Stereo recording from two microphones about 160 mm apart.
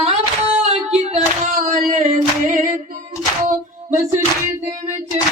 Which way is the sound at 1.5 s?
55° right (ahead or behind).